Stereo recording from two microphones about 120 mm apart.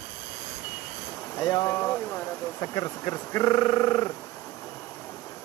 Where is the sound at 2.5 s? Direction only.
30° left (ahead or behind).